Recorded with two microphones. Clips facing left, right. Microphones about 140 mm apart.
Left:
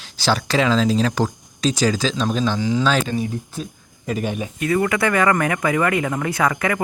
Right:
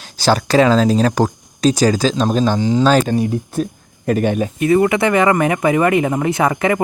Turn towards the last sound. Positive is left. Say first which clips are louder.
# right 5 dB
turn(degrees=-25)  # may be behind; listen again after turning